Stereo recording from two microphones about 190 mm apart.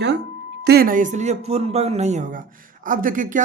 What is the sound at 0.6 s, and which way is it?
Speech, 55° right (ahead or behind).